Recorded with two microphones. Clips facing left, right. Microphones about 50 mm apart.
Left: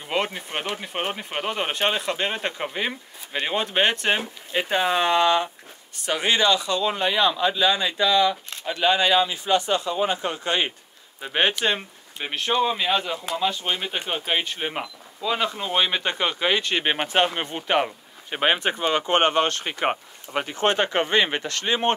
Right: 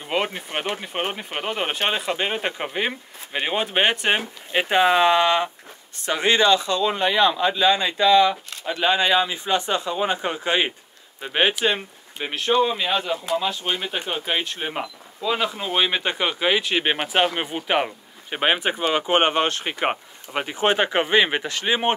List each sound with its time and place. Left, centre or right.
0.0 s speech: centre
4.5 s speech: right
5.0 s speech: right
8.6 s speech: right
11.1 s speech: centre